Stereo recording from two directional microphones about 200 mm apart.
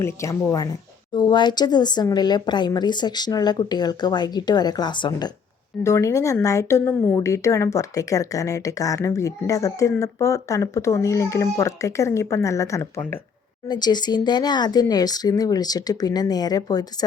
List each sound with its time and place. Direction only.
0.0 s a woman's voice: 15° left (ahead or behind)